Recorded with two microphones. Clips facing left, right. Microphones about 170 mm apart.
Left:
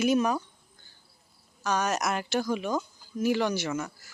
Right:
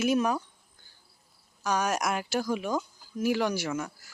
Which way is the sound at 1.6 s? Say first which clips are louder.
Even; 10° right (ahead or behind).